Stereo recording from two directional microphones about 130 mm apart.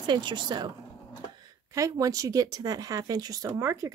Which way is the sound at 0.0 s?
35° right (ahead or behind).